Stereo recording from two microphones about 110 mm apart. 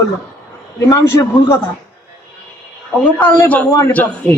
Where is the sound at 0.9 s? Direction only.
25° left (ahead or behind).